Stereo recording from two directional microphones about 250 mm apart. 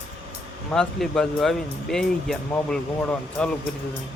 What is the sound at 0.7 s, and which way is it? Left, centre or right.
Speech, centre.